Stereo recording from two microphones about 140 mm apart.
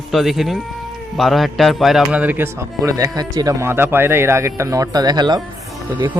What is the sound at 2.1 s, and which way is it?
Speech, 10° right (ahead or behind).